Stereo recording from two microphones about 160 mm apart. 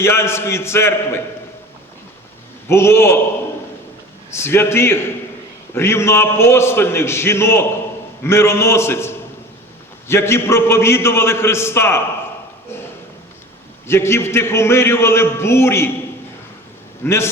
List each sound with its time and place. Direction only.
0.0 s a man's voice: 15° left (ahead or behind)
2.6 s a man's voice: 15° left (ahead or behind)
4.3 s a man's voice: 15° left (ahead or behind)
13.8 s a man's voice: 15° left (ahead or behind)
17.0 s a man's voice: 15° left (ahead or behind)